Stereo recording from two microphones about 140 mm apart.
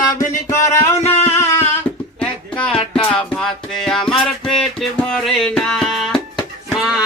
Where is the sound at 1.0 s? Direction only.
50° left (ahead or behind).